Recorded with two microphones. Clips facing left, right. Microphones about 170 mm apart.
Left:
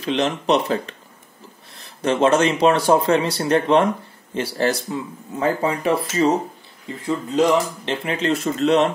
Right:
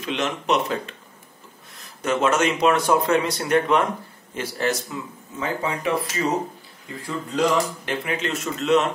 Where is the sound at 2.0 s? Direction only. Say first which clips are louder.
Left 4 dB; 30° left (ahead or behind).